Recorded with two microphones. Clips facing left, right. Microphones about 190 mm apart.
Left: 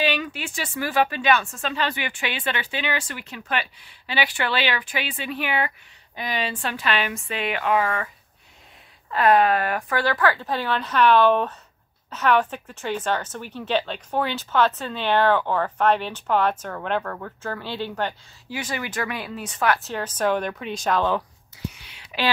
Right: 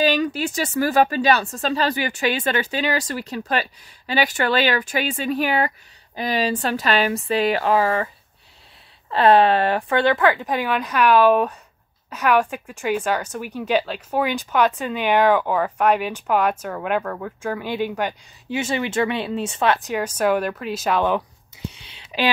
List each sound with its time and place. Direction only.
0.0 s speech: 40° right (ahead or behind)
9.1 s speech: 30° right (ahead or behind); by 18.1 s 15° right (ahead or behind)
18.5 s speech: 25° right (ahead or behind)
19.9 s speech: 10° right (ahead or behind)
21.0 s a sound: 20° right (ahead or behind)